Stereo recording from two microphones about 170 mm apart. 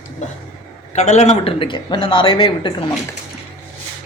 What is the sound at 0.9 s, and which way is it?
Speech, 40° left (ahead or behind).